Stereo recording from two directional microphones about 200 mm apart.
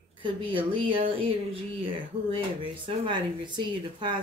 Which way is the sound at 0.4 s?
25° right (ahead or behind).